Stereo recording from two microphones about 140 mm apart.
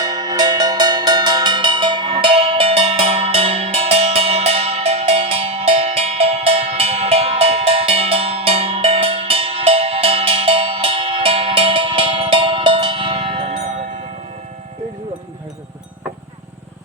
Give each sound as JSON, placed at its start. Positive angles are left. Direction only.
{"t": 0.0, "sound": "cowbell", "side_deg": -25}